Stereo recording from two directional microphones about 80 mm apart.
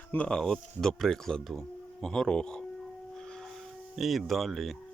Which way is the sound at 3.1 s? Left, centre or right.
Centre.